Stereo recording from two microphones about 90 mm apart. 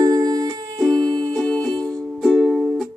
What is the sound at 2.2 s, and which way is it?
Music, 5° right (ahead or behind).